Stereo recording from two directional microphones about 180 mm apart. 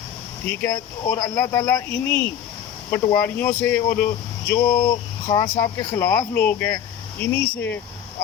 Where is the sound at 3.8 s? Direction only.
55° left (ahead or behind).